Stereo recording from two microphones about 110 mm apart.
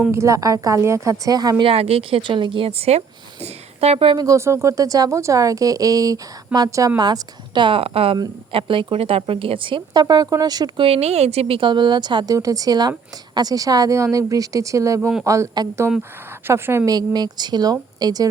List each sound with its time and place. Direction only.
0.1 s speech: 25° right (ahead or behind)
1.6 s a woman's voice: 60° right (ahead or behind)
4.2 s speech: 30° right (ahead or behind)
10.8 s a woman's voice: 70° right (ahead or behind); by 16.9 s 20° right (ahead or behind)
16.9 s speech: 40° right (ahead or behind)